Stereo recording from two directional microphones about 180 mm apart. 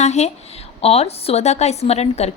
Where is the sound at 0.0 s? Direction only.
40° left (ahead or behind).